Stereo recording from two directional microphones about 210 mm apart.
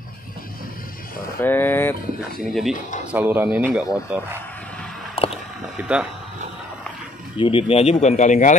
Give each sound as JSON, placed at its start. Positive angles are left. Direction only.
{"t": 1.4, "sound": "speech", "side_deg": 10}
{"t": 3.1, "sound": "speech", "side_deg": -10}
{"t": 5.1, "sound": "a sound", "side_deg": 30}
{"t": 5.8, "sound": "speech", "side_deg": -5}
{"t": 7.3, "sound": "speech", "side_deg": 25}